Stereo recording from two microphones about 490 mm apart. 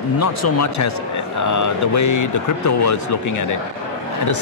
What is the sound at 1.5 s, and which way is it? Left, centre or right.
A man's voice, left.